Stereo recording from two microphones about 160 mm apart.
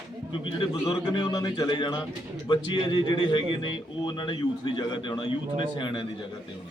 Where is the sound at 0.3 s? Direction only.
30° left (ahead or behind).